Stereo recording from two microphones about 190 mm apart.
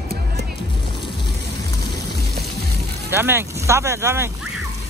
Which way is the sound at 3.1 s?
10° right (ahead or behind).